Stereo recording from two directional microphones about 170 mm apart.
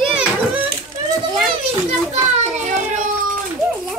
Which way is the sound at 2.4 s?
45° right (ahead or behind).